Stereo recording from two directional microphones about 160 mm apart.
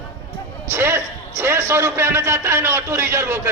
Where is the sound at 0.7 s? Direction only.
15° right (ahead or behind).